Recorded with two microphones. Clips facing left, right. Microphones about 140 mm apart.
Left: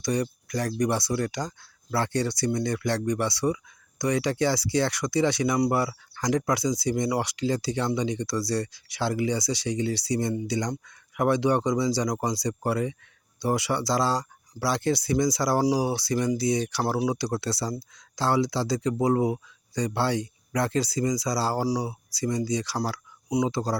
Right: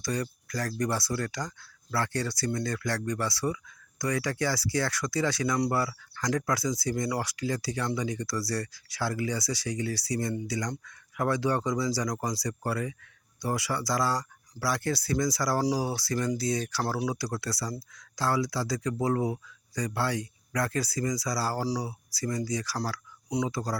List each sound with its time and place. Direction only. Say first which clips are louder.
0.0 s speech: left 5 dB; 20° left (ahead or behind)